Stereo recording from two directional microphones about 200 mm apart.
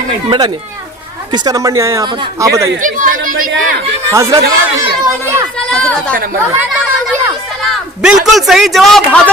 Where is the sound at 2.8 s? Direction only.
40° right (ahead or behind).